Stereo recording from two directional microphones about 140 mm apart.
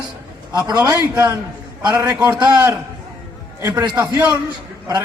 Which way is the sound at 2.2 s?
5° right (ahead or behind).